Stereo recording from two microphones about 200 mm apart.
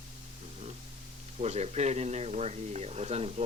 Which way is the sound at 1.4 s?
35° right (ahead or behind).